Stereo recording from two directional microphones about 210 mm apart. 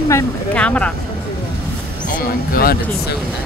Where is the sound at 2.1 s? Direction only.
40° left (ahead or behind).